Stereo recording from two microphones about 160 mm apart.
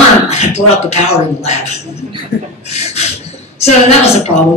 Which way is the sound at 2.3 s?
85° left.